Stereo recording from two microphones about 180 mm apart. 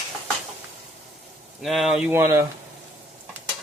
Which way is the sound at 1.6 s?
Centre (ahead or behind).